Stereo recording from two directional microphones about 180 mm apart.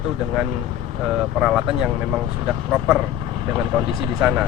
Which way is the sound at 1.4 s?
5° right (ahead or behind).